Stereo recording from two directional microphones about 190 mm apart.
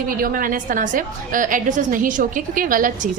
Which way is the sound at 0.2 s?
50° right (ahead or behind).